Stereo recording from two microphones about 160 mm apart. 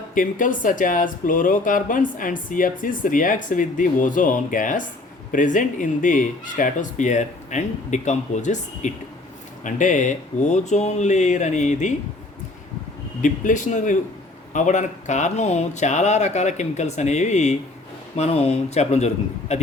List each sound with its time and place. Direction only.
0.1 s speech: 55° left (ahead or behind)
13.2 s speech: 55° left (ahead or behind)